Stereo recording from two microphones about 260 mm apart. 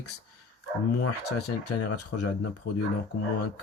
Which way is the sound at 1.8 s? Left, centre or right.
Left.